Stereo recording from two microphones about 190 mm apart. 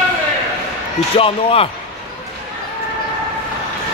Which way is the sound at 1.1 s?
30° left (ahead or behind).